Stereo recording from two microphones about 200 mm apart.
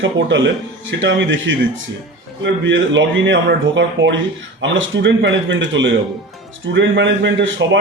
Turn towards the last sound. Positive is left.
turn(degrees=-65)  # may be behind; listen again after turning